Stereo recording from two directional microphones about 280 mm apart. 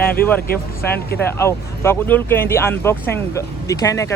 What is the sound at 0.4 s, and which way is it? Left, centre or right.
Speech, left.